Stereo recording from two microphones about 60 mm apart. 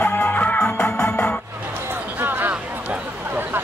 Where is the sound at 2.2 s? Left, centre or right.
Right.